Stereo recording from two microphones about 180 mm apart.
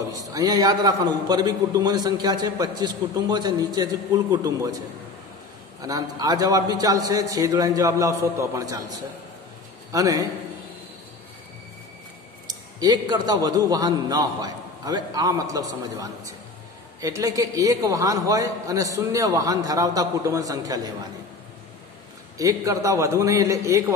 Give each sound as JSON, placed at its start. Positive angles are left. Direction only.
{"t": 0.1, "sound": "a man's voice", "side_deg": -20}
{"t": 9.9, "sound": "a man's voice", "side_deg": -20}
{"t": 12.4, "sound": "a man's voice", "side_deg": -20}
{"t": 22.4, "sound": "a man's voice", "side_deg": -20}